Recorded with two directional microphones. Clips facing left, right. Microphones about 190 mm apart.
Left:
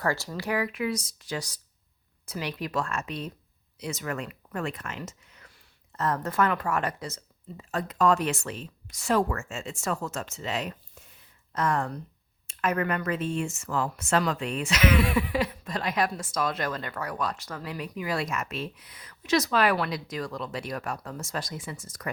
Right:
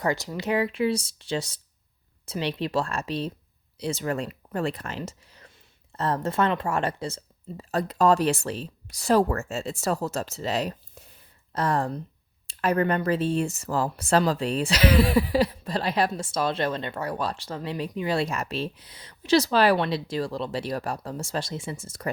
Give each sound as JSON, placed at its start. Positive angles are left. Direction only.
{"t": 0.0, "sound": "speech", "side_deg": -20}